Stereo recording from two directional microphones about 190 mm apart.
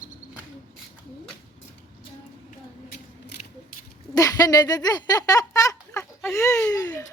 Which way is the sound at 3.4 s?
45° left (ahead or behind).